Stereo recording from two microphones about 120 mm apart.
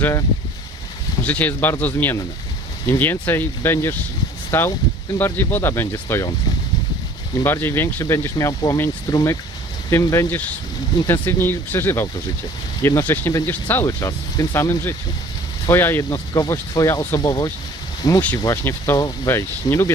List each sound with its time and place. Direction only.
0.0 s speech: 25° left (ahead or behind)
1.2 s speech: 15° left (ahead or behind)
7.3 s speech: 20° left (ahead or behind)
12.8 s speech: 30° left (ahead or behind)
13.1 s speech: 20° left (ahead or behind)
13.8 s speech: 25° left (ahead or behind)
16.0 s speech: 30° left (ahead or behind)